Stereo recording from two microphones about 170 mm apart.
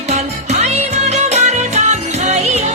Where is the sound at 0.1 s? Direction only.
40° right (ahead or behind).